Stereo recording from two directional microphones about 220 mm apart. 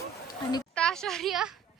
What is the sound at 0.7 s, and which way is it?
Speech, 5° left (ahead or behind).